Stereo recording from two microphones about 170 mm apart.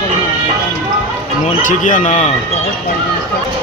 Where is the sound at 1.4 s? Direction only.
50° left (ahead or behind).